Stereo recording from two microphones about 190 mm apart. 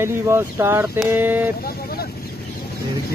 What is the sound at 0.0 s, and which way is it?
Speech, 15° right (ahead or behind).